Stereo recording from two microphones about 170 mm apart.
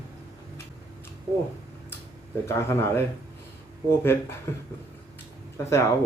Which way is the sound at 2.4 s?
15° left (ahead or behind).